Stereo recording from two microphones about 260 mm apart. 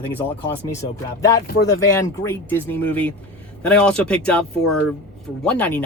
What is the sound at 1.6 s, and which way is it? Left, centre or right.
Speech, centre.